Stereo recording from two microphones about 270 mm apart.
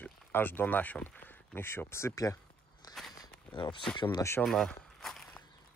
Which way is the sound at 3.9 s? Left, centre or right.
Centre.